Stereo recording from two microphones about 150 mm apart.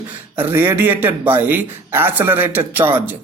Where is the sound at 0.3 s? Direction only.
15° right (ahead or behind).